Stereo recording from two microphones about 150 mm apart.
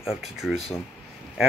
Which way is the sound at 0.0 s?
5° right (ahead or behind).